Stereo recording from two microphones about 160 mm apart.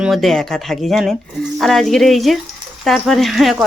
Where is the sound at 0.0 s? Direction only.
Centre (ahead or behind).